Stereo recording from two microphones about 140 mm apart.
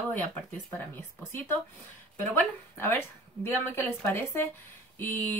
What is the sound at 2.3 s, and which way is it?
Speech, 15° left (ahead or behind).